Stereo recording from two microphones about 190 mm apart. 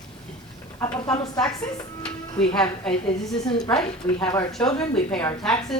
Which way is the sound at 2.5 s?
5° left (ahead or behind).